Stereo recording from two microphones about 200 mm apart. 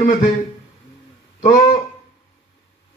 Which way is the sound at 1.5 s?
40° left (ahead or behind).